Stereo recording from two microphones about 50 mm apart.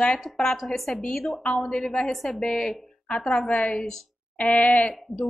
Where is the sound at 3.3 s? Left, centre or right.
Left.